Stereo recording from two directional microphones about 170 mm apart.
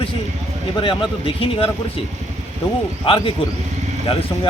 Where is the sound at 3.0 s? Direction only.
30° left (ahead or behind).